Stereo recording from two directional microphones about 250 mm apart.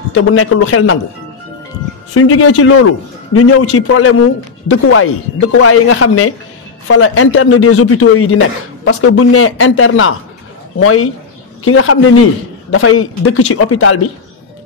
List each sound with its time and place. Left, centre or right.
0.1 s a man's voice: left
2.1 s a man's voice: left